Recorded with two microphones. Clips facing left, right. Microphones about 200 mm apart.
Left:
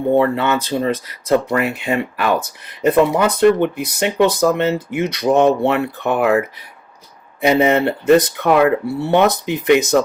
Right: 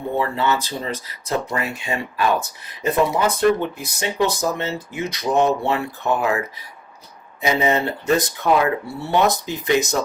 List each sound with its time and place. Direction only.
0.2 s speech: 55° left (ahead or behind)
7.4 s speech: 60° left (ahead or behind)